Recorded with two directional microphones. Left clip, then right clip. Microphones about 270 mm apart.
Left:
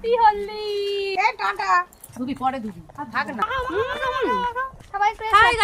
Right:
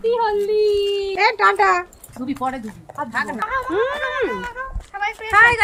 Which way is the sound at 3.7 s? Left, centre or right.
Centre.